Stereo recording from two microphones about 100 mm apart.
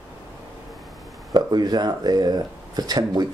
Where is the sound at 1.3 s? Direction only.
45° right (ahead or behind).